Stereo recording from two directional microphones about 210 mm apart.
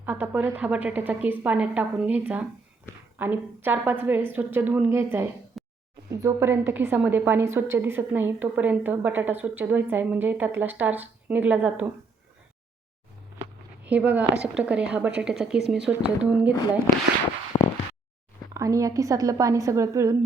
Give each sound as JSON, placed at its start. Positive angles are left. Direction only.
{"t": 0.0, "sound": "a woman's voice", "side_deg": -10}
{"t": 5.6, "sound": "a sound", "side_deg": 0}
{"t": 6.1, "sound": "a woman's voice", "side_deg": -15}
{"t": 13.8, "sound": "a woman's voice", "side_deg": -5}
{"t": 17.5, "sound": "a sound", "side_deg": 15}
{"t": 18.5, "sound": "a woman's voice", "side_deg": -15}